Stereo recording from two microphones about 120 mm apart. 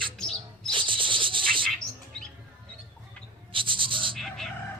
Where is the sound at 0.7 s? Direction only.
45° right (ahead or behind).